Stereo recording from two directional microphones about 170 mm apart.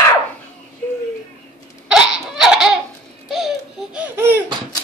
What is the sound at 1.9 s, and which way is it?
Laughter, 5° right (ahead or behind).